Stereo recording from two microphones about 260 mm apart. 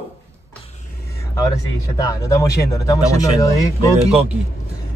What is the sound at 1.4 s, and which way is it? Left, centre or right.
Speech, centre.